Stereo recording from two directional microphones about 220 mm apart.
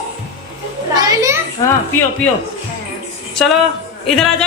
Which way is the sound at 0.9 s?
15° right (ahead or behind).